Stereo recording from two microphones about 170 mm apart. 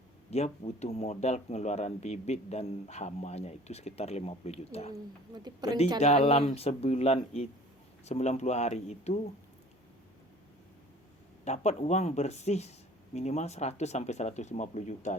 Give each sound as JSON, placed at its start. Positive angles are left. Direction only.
{"t": 0.3, "sound": "speech", "side_deg": 40}
{"t": 5.5, "sound": "speech", "side_deg": -25}
{"t": 6.0, "sound": "speech", "side_deg": 40}
{"t": 11.4, "sound": "speech", "side_deg": 40}